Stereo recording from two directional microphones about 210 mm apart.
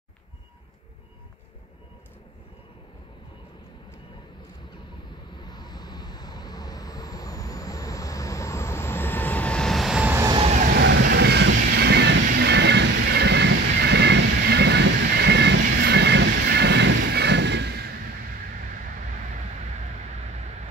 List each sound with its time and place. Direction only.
5.4 s vehicle: 20° left (ahead or behind); by 10.4 s 15° right (ahead or behind)
10.8 s vehicle: 55° right (ahead or behind)
12.3 s train: 55° right (ahead or behind)